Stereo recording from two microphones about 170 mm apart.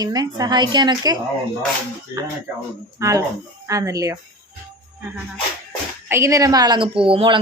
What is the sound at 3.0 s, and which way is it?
A woman's voice, 20° right (ahead or behind).